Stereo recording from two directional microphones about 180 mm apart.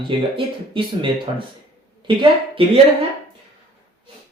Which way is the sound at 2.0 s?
30° right (ahead or behind).